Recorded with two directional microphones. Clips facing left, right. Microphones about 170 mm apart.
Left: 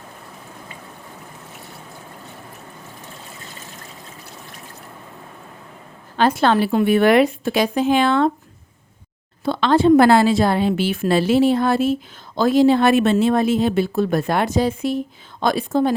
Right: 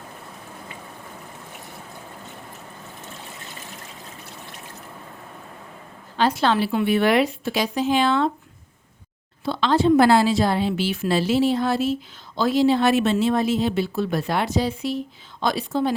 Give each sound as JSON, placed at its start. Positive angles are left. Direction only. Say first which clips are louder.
{"t": 6.1, "sound": "speech", "louder": "left 4 dB", "side_deg": 50}
{"t": 9.4, "sound": "speech", "louder": "left 4 dB", "side_deg": 55}